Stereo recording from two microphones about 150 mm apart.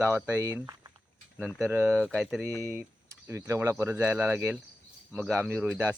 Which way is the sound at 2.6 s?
15° right (ahead or behind).